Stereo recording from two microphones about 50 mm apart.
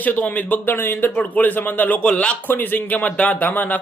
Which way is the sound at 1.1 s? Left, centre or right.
Left.